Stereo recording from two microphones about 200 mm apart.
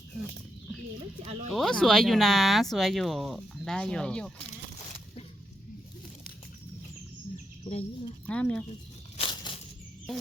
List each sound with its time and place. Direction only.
1.2 s speech: 30° right (ahead or behind)
1.5 s speech: centre (ahead or behind)
7.6 s speech: 30° left (ahead or behind)
8.3 s speech: 5° left (ahead or behind)
9.1 s a sound: 25° left (ahead or behind)